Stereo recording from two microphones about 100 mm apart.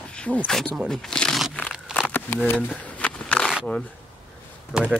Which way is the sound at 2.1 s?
20° left (ahead or behind).